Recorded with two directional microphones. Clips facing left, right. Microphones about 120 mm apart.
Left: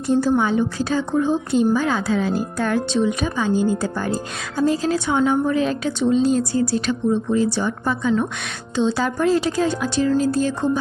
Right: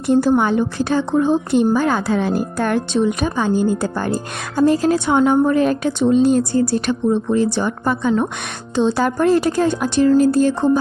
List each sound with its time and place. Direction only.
0.1 s a woman's voice: 65° right (ahead or behind)